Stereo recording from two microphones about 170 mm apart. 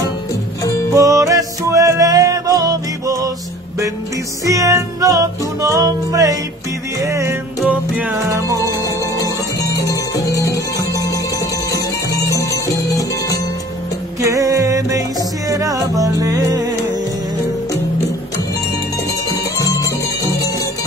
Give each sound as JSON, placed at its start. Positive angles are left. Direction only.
{"t": 0.9, "sound": "music", "side_deg": -20}
{"t": 4.5, "sound": "music", "side_deg": -20}
{"t": 9.6, "sound": "music", "side_deg": 20}
{"t": 14.2, "sound": "music", "side_deg": -20}
{"t": 19.2, "sound": "music", "side_deg": 20}